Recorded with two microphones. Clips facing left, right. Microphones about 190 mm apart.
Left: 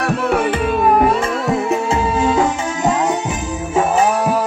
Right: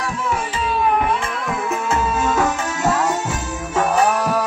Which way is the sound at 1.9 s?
15° left (ahead or behind).